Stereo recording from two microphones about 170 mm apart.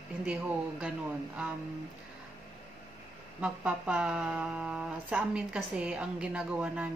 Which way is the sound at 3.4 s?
5° right (ahead or behind).